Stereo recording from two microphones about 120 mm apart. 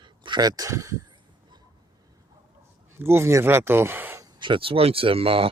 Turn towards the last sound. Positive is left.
turn(degrees=-50)  # may be behind; listen again after turning